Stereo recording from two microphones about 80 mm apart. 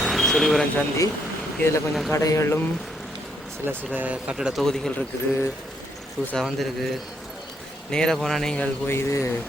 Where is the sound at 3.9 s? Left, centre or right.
Centre.